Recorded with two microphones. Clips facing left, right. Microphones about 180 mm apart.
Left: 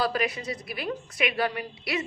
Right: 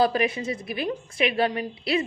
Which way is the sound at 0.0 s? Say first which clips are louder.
Right 5 dB; 25° right (ahead or behind).